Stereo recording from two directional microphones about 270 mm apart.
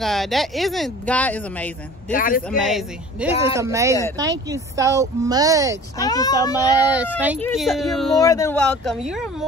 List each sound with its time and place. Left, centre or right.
0.0 s speech: centre
2.1 s speech: left
2.4 s speech: centre
3.5 s speech: centre
5.9 s speech: centre
7.4 s speech: centre
8.2 s speech: centre